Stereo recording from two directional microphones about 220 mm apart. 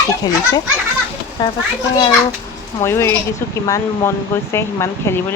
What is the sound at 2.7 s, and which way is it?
Speech, 10° left (ahead or behind).